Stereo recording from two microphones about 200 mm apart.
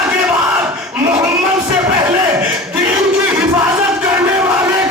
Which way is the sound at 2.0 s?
10° right (ahead or behind).